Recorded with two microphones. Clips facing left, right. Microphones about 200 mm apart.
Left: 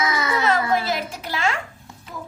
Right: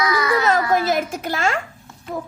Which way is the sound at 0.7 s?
50° right (ahead or behind).